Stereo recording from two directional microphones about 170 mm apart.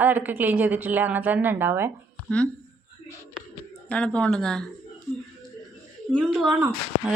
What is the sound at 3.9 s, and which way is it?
Speech, 5° left (ahead or behind).